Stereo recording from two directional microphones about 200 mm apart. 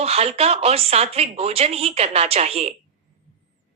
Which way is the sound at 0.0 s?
30° right (ahead or behind).